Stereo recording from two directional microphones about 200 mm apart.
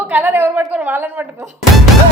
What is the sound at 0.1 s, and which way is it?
A woman's voice, 10° right (ahead or behind).